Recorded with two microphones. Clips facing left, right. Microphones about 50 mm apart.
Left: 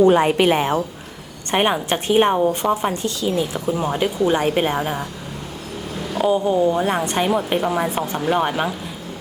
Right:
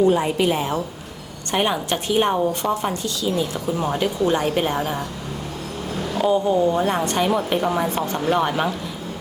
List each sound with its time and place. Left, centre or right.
0.0 s a woman's voice: left
1.5 s a woman's voice: left
3.7 s speech: centre
3.9 s a woman's voice: centre
6.1 s speech: centre